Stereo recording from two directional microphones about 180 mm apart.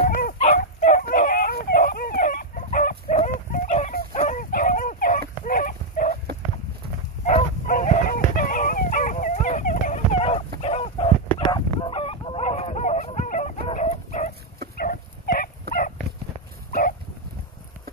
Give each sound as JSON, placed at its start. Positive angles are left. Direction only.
{"t": 0.2, "sound": "dog", "side_deg": 45}
{"t": 5.4, "sound": "a sound", "side_deg": 45}
{"t": 7.2, "sound": "dog", "side_deg": 45}
{"t": 10.6, "sound": "fowl", "side_deg": 35}
{"t": 14.8, "sound": "dog", "side_deg": 55}